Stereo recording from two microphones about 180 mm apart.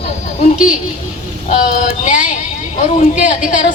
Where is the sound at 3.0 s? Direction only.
45° left (ahead or behind).